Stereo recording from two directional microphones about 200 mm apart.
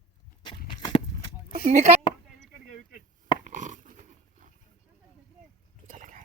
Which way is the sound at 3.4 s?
40° right (ahead or behind).